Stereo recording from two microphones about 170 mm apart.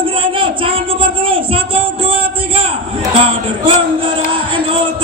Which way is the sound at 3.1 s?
35° right (ahead or behind).